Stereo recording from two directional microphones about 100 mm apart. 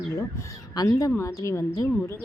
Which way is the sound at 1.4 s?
30° left (ahead or behind).